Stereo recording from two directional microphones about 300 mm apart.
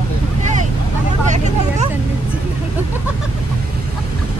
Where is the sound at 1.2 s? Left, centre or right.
Right.